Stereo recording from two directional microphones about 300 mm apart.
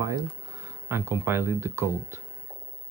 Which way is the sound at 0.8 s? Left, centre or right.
Centre.